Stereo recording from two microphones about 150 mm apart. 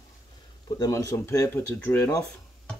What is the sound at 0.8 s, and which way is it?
Speech, 20° left (ahead or behind).